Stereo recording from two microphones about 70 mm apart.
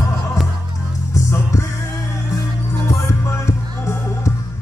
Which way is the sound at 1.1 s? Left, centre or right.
Left.